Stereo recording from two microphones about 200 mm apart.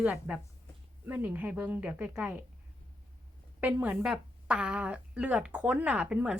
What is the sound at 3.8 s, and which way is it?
Speech, 5° right (ahead or behind).